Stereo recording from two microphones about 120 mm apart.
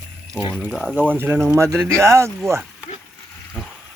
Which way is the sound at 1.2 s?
20° right (ahead or behind).